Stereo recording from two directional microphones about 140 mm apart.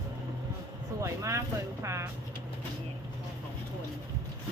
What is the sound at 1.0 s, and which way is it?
Speech, 20° right (ahead or behind).